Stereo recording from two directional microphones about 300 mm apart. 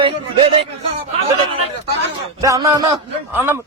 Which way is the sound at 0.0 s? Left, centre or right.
Centre.